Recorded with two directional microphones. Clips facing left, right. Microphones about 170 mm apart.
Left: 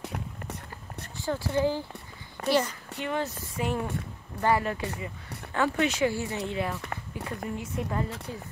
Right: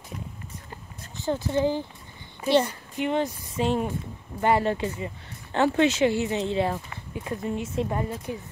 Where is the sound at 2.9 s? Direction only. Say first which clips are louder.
Right 5 dB; 15° right (ahead or behind).